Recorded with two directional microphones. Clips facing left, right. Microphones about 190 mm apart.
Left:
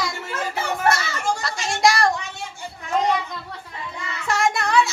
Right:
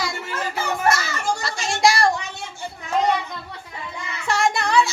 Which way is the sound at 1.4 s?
Centre (ahead or behind).